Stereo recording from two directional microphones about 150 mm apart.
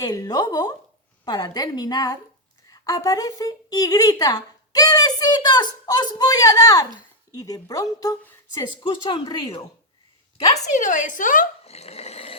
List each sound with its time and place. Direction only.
0.0 s a woman's voice: 25° left (ahead or behind)
8.5 s a woman's voice: 35° left (ahead or behind)
10.3 s a woman's voice: 50° left (ahead or behind)
11.6 s dog: 45° left (ahead or behind)